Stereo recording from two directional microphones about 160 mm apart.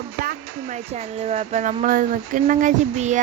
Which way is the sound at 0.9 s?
45° right (ahead or behind).